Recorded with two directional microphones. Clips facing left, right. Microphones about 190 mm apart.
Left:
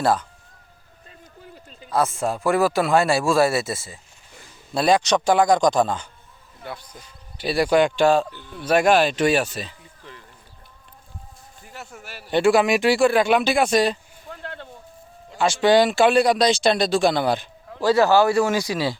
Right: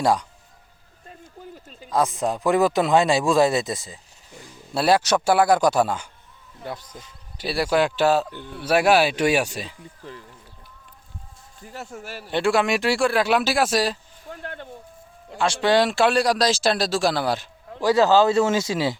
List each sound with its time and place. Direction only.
0.0 s speech: 10° right (ahead or behind)
1.9 s speech: 15° right (ahead or behind)
6.6 s speech: 35° right (ahead or behind)
7.4 s speech: centre (ahead or behind)
10.0 s speech: 40° right (ahead or behind)
11.6 s speech: 40° right (ahead or behind)
12.3 s speech: centre (ahead or behind)
15.4 s speech: centre (ahead or behind)
17.7 s a man's voice: 15° right (ahead or behind)